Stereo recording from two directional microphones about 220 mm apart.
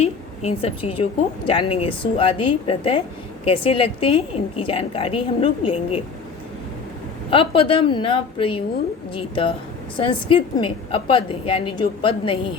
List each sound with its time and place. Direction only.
0.0 s a woman's voice: 25° left (ahead or behind)
7.3 s a woman's voice: 25° left (ahead or behind)